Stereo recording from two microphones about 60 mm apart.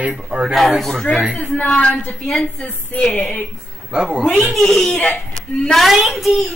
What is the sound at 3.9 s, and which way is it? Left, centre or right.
Speech, centre.